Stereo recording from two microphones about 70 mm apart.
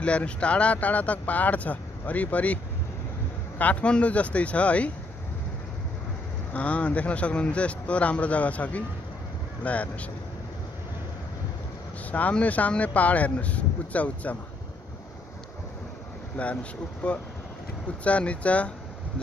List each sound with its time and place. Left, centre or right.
0.0 s speech: centre
6.5 s speech: centre
12.1 s speech: left
16.4 s speech: left